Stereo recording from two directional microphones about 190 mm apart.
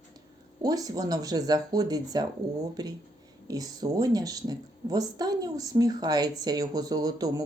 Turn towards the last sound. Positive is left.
turn(degrees=-20)  # may be behind; listen again after turning